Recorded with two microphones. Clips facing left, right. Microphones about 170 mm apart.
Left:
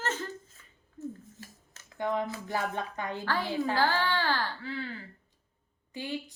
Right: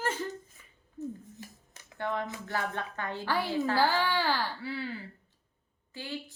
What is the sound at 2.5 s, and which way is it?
Speech, 15° left (ahead or behind).